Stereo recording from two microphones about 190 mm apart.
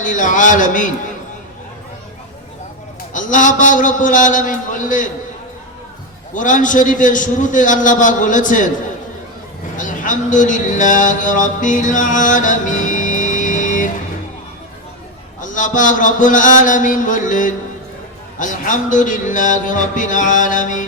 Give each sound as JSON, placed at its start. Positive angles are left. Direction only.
{"t": 0.0, "sound": "speech", "side_deg": 40}
{"t": 3.1, "sound": "speech", "side_deg": 45}
{"t": 6.3, "sound": "speech", "side_deg": 40}
{"t": 9.7, "sound": "a man's voice", "side_deg": 40}
{"t": 15.4, "sound": "speech", "side_deg": 40}